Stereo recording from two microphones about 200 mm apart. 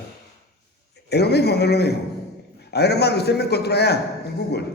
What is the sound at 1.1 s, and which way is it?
A man's voice, 55° left (ahead or behind).